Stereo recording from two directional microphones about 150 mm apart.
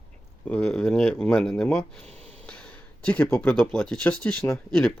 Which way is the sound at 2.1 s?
45° right (ahead or behind).